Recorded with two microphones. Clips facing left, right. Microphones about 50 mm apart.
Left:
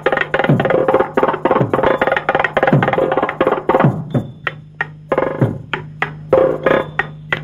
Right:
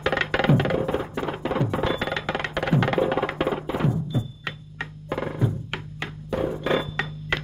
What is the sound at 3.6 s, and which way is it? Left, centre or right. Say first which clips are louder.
Music: left 13 dB; left.